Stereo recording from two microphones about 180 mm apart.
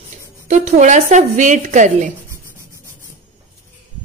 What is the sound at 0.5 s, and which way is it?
A woman's voice, 40° right (ahead or behind).